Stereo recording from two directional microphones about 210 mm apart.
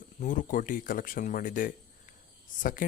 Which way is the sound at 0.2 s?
40° left (ahead or behind).